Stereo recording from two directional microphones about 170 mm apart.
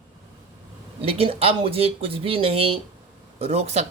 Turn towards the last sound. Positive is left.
turn(degrees=-40)  # may be behind; listen again after turning